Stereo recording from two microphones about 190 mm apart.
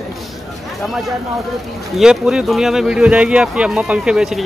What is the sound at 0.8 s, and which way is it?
Speech, centre (ahead or behind).